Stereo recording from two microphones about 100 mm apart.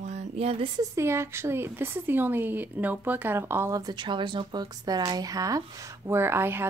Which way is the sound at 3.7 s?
45° right (ahead or behind).